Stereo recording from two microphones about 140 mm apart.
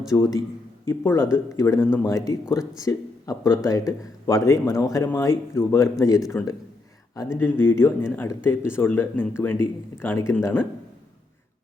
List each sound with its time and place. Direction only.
0.1 s speech: 20° left (ahead or behind)
6.3 s speech: 10° left (ahead or behind)